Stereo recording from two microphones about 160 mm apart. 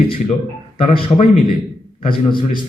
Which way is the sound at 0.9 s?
35° left (ahead or behind).